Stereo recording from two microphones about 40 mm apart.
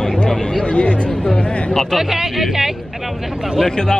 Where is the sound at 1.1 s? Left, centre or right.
Centre.